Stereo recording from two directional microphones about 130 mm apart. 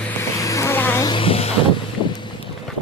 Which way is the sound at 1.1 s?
45° left (ahead or behind).